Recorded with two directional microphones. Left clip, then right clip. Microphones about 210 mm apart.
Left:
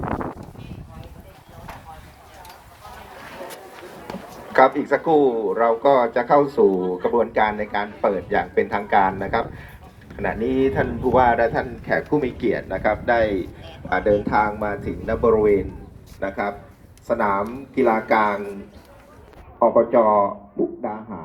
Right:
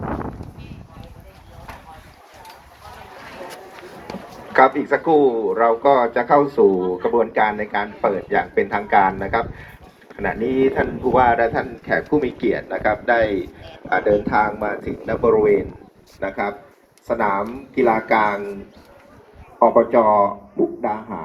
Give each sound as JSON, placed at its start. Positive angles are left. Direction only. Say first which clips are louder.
{"t": 3.2, "sound": "a sound", "louder": "right 1 dB", "side_deg": 40}
{"t": 4.0, "sound": "speech", "louder": "right 1 dB", "side_deg": 35}
{"t": 19.5, "sound": "speech", "louder": "right 2 dB", "side_deg": 40}